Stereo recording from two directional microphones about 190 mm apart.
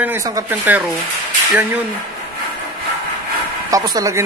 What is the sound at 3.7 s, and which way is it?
Speech, 20° right (ahead or behind).